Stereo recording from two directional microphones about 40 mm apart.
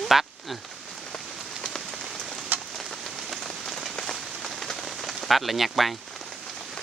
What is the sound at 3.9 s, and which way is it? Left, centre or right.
Rain on surface, centre.